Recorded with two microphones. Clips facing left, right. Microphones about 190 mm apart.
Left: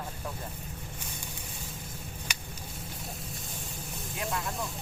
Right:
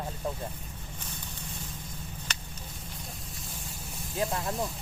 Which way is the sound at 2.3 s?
10° left (ahead or behind).